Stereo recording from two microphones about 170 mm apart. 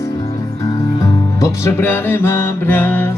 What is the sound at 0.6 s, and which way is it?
Music, 20° left (ahead or behind).